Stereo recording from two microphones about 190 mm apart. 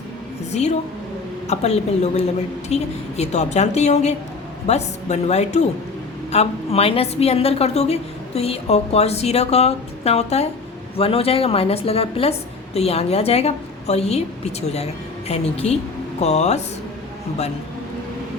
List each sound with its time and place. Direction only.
0.5 s a woman's voice: 35° left (ahead or behind)